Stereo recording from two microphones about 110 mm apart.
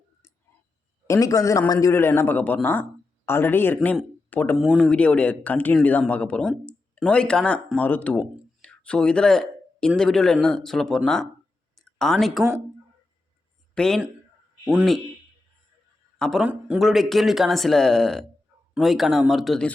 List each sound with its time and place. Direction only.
1.0 s a man's voice: 30° left (ahead or behind)
1.9 s a man's voice: 20° left (ahead or behind)
4.5 s speech: 5° right (ahead or behind)
4.8 s speech: 10° left (ahead or behind)
11.7 s a sound: 5° left (ahead or behind)
13.7 s speech: 5° left (ahead or behind)
16.1 s a man's voice: 5° left (ahead or behind)
16.4 s a man's voice: 10° right (ahead or behind)